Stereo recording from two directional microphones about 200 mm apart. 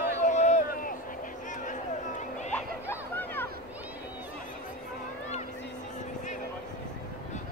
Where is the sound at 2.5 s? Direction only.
10° left (ahead or behind).